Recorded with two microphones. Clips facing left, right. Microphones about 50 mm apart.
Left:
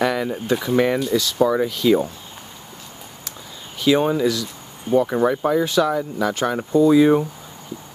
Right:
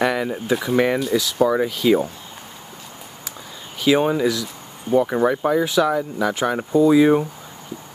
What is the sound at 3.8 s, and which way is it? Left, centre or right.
Speech, centre.